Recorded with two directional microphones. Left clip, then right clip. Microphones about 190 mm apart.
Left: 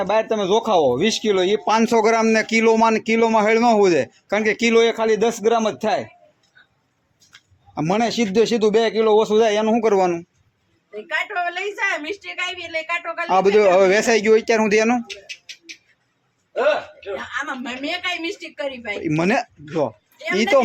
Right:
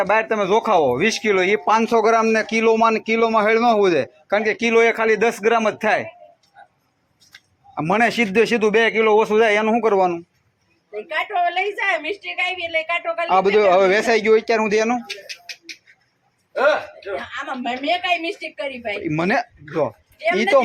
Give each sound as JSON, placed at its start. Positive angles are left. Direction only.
{"t": 0.0, "sound": "speech", "side_deg": 25}
{"t": 7.8, "sound": "speech", "side_deg": 25}
{"t": 11.4, "sound": "a woman's voice", "side_deg": 10}
{"t": 13.3, "sound": "speech", "side_deg": 30}
{"t": 17.6, "sound": "a woman's voice", "side_deg": 15}